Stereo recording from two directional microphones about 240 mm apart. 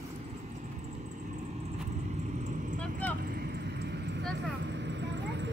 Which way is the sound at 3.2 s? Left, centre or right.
Right.